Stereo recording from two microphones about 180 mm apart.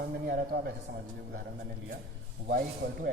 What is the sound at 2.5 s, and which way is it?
Speech, 55° right (ahead or behind).